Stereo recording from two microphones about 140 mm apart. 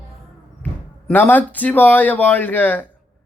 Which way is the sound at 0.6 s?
15° left (ahead or behind).